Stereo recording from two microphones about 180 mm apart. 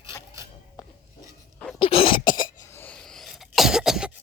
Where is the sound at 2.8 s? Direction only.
5° left (ahead or behind).